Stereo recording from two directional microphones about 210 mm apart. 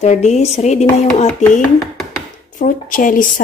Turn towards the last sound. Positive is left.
turn(degrees=40)  # may be behind; listen again after turning